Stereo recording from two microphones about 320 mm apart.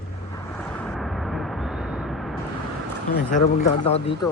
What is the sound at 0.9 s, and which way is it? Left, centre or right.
Vehicle, centre.